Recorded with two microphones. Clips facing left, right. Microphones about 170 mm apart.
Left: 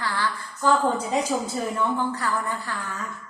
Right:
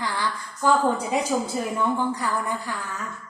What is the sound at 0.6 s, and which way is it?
Child singing, 15° right (ahead or behind).